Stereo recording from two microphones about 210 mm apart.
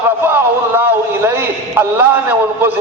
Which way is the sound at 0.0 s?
10° right (ahead or behind).